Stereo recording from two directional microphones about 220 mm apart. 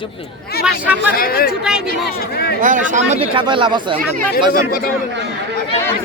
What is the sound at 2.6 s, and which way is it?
Speech, 35° right (ahead or behind).